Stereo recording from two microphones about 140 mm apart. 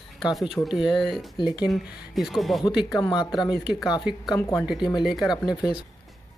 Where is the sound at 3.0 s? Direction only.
30° left (ahead or behind).